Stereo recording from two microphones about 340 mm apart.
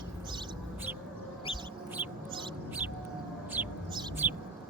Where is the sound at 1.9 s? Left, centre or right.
Centre.